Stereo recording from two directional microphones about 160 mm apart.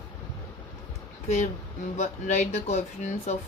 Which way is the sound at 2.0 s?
45° left (ahead or behind).